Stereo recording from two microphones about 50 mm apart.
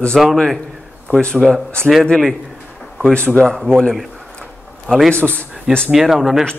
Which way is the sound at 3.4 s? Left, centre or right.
Centre.